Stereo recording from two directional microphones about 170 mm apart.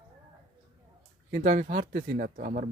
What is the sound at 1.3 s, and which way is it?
Speech, 45° right (ahead or behind).